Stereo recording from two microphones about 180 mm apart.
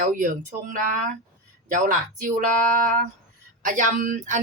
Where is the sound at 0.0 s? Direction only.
50° right (ahead or behind).